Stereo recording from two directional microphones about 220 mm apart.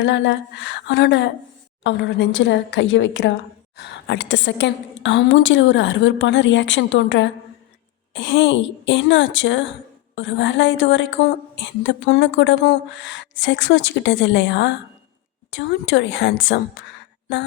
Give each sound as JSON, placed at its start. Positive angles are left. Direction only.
{"t": 0.0, "sound": "a woman's voice", "side_deg": 55}